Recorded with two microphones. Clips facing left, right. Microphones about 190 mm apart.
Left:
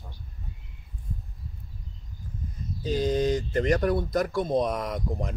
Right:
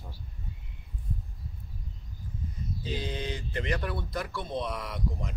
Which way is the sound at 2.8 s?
45° left (ahead or behind).